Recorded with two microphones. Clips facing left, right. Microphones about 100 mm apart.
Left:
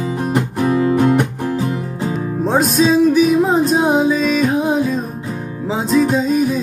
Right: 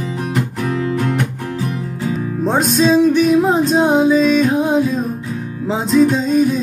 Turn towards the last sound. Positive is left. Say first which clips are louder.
# right 1 dB
turn(degrees=5)  # may be behind; listen again after turning